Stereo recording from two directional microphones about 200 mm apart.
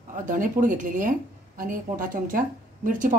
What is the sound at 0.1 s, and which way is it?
Speech, 40° right (ahead or behind).